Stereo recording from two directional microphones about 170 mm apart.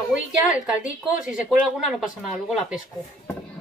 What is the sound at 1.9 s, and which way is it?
Speech, centre (ahead or behind).